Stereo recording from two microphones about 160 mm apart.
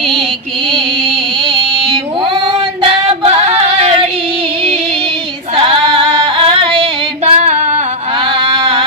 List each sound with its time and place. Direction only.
2.8 s female singing: 35° right (ahead or behind)
7.3 s female singing: 45° right (ahead or behind)
8.4 s music: 35° right (ahead or behind)